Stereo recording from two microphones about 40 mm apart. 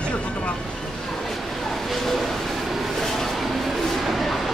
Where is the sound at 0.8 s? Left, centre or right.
Centre.